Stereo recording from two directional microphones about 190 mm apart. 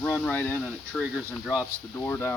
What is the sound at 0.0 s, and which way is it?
Speech, 10° left (ahead or behind).